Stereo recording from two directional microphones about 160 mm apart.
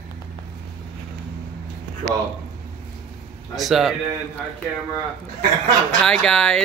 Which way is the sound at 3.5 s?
Centre (ahead or behind).